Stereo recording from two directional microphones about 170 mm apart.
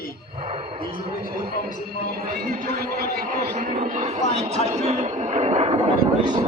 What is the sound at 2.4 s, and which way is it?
Speech, 60° right (ahead or behind).